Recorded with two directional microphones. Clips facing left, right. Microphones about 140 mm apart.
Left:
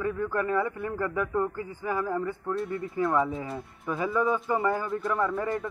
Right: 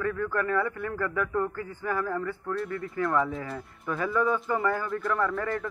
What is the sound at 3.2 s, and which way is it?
Speech, centre (ahead or behind).